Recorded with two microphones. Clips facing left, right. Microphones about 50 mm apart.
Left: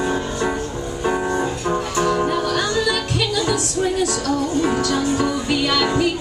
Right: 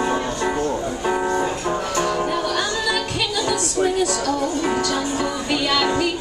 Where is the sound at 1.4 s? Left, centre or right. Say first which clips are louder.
Even; right.